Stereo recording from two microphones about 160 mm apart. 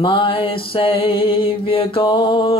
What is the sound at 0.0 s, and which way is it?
Music, 35° left (ahead or behind).